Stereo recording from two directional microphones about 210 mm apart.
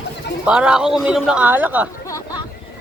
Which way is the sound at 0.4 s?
5° right (ahead or behind).